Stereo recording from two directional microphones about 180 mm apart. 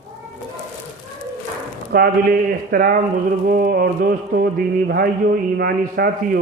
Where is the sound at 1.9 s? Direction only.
55° right (ahead or behind).